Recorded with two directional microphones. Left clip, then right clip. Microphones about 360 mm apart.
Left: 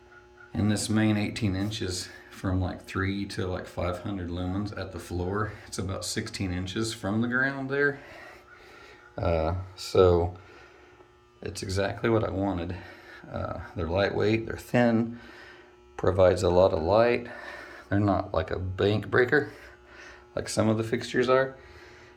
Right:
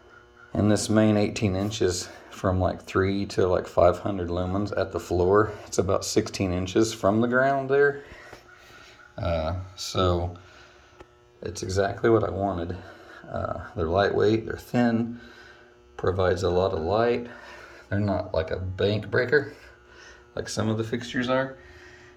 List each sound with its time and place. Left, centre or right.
0.5 s speech: centre
7.8 s speech: centre
11.4 s speech: centre
13.9 s speech: centre